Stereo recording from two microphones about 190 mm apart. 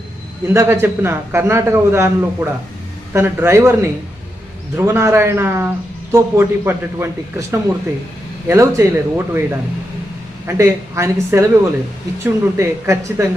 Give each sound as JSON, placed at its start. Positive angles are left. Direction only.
{"t": 0.4, "sound": "a man's voice", "side_deg": -15}
{"t": 10.4, "sound": "a man's voice", "side_deg": -15}